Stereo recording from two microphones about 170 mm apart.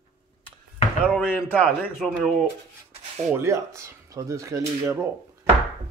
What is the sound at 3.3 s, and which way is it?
Speech, 15° right (ahead or behind).